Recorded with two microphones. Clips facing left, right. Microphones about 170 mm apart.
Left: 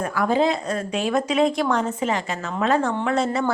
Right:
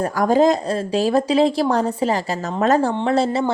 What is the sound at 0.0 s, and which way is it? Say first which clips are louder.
A woman's voice: right 5 dB; 40° right (ahead or behind).